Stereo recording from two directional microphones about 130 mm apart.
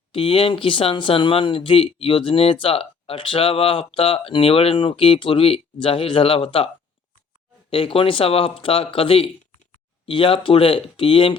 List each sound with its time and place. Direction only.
0.1 s speech: 45° left (ahead or behind)
7.7 s speech: 45° left (ahead or behind)